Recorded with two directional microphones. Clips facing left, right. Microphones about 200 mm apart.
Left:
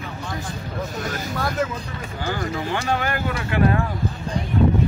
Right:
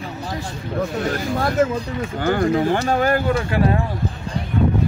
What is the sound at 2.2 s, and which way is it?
Speech, 55° right (ahead or behind).